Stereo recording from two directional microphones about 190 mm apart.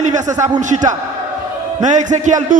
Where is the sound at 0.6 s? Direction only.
40° right (ahead or behind).